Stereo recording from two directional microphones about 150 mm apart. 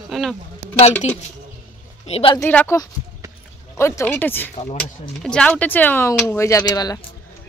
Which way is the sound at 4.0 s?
15° left (ahead or behind).